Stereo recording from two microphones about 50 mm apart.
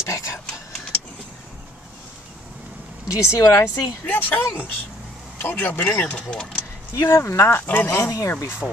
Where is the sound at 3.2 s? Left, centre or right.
Left.